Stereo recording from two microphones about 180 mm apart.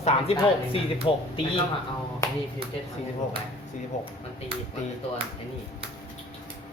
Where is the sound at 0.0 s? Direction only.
35° left (ahead or behind).